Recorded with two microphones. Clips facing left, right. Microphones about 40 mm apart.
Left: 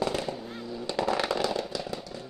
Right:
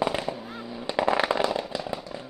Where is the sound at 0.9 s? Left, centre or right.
Right.